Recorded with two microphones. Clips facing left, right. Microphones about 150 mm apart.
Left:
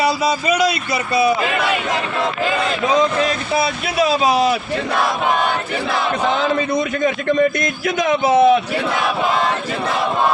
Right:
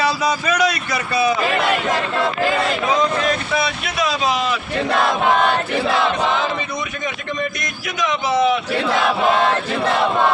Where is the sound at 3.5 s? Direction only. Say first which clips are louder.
Left 3 dB; 30° left (ahead or behind).